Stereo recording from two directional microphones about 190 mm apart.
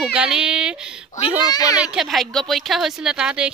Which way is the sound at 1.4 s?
20° left (ahead or behind).